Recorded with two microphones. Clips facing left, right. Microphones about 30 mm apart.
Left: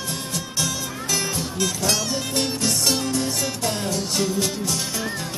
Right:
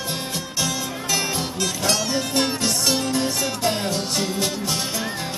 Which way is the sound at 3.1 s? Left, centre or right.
Right.